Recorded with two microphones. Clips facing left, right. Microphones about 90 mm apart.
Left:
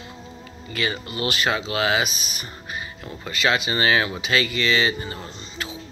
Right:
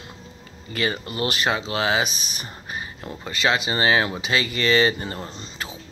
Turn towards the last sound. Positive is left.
turn(degrees=-35)  # may be behind; listen again after turning